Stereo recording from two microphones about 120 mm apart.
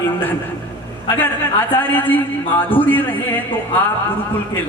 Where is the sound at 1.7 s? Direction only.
15° left (ahead or behind).